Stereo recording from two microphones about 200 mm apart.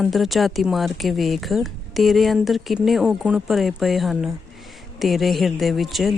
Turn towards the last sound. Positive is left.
turn(degrees=0)  # may be behind; listen again after turning